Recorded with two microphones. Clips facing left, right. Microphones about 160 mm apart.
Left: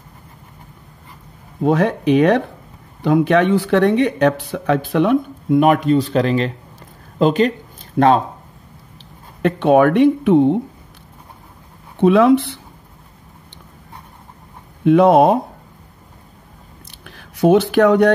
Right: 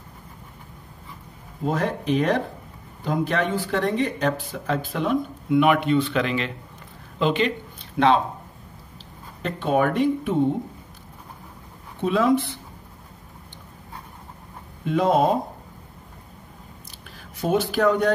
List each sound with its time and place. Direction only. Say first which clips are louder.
1.6 s speech: left 8 dB; 70° left (ahead or behind)
5.5 s speech: left 5 dB; 40° left (ahead or behind)
9.4 s speech: left 9 dB; 70° left (ahead or behind)
12.0 s speech: left 8 dB; 70° left (ahead or behind)
14.9 s speech: left 9 dB; 70° left (ahead or behind)
17.0 s speech: left 12 dB; 65° left (ahead or behind)